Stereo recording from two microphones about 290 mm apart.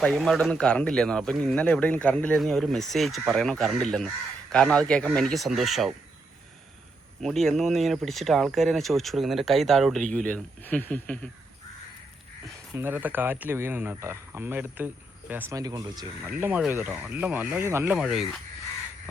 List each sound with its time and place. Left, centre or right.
0.0 s speech: centre
7.2 s speech: centre
12.7 s speech: centre